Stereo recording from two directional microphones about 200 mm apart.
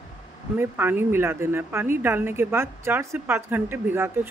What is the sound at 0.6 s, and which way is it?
Speech, 10° right (ahead or behind).